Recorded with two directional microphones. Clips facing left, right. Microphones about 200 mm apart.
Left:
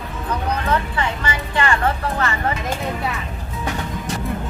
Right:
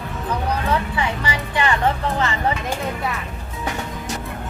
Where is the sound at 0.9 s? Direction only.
15° right (ahead or behind).